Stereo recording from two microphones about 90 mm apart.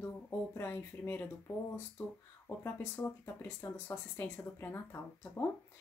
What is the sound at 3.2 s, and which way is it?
Speech, 25° left (ahead or behind).